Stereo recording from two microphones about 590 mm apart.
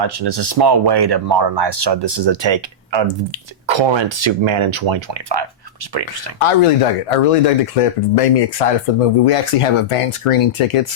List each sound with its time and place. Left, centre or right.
0.0 s speech: right
6.4 s speech: left